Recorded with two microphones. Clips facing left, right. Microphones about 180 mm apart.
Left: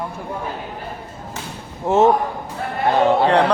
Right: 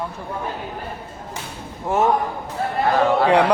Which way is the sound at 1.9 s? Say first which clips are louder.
Left 4 dB; 25° left (ahead or behind).